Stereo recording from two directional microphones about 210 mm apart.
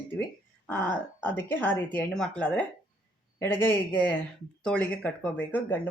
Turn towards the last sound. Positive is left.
turn(degrees=10)  # may be behind; listen again after turning